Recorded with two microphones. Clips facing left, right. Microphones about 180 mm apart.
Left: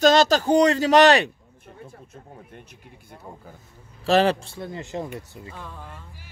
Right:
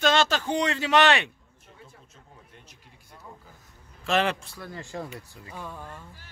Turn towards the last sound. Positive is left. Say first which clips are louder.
# right 1 dB
turn(degrees=-10)  # may be behind; listen again after turning